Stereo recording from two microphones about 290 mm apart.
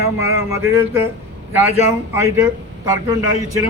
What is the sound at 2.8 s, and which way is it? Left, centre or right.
Speech, centre.